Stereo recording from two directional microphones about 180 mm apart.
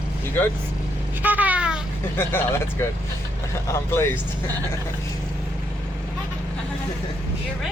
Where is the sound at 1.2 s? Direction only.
10° right (ahead or behind).